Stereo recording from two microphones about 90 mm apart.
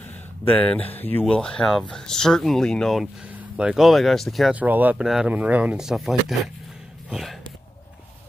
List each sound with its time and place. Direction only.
0.5 s speech: 15° left (ahead or behind)
1.3 s speech: 10° left (ahead or behind)
3.5 s speech: 10° right (ahead or behind)
4.5 s speech: 20° right (ahead or behind)
5.0 s speech: 5° right (ahead or behind)
5.3 s speech: 15° right (ahead or behind)
5.8 s speech: 5° right (ahead or behind)